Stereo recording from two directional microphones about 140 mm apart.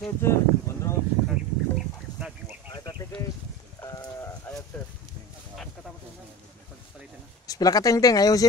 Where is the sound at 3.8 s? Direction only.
20° left (ahead or behind).